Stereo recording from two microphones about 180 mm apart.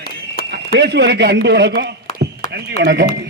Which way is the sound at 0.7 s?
70° right (ahead or behind).